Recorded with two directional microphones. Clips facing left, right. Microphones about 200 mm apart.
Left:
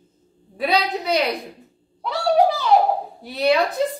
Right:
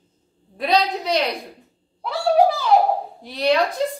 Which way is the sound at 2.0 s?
Centre (ahead or behind).